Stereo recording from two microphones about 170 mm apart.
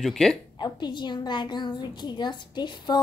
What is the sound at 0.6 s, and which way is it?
A woman's voice, 25° left (ahead or behind).